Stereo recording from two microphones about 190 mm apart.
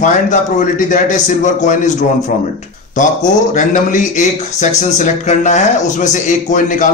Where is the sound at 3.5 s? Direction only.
40° left (ahead or behind).